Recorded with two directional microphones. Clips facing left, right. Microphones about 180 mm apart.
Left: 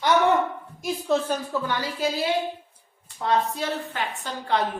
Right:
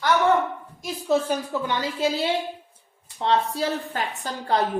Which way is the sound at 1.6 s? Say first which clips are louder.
Right 2 dB; 25° right (ahead or behind).